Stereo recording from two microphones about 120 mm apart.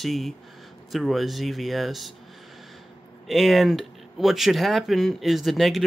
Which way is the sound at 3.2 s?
Centre (ahead or behind).